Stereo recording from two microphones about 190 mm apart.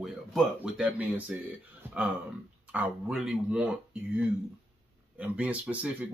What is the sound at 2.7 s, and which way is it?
Speech, 10° right (ahead or behind).